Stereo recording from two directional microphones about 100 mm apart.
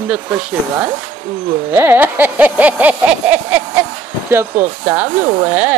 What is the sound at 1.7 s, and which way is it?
Speech, 20° right (ahead or behind).